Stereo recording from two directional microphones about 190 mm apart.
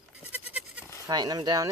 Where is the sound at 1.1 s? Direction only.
20° right (ahead or behind).